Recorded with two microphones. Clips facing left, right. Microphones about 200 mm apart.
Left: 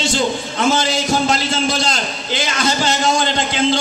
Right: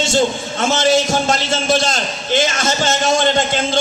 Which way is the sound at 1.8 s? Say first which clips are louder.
Right 1 dB; 45° right (ahead or behind).